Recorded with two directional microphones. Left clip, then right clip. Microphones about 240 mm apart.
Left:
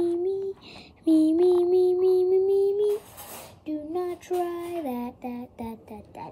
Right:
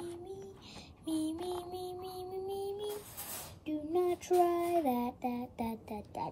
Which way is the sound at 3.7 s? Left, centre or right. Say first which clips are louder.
Left 3 dB; centre.